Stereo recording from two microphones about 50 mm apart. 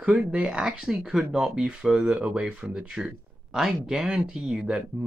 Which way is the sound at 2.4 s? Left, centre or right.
Right.